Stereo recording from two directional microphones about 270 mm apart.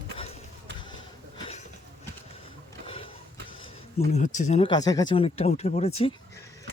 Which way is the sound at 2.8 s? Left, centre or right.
Centre.